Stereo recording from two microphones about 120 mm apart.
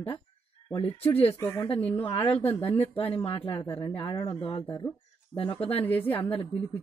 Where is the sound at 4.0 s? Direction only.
40° left (ahead or behind).